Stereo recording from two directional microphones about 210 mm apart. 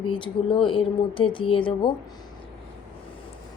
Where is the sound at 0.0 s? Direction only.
25° left (ahead or behind).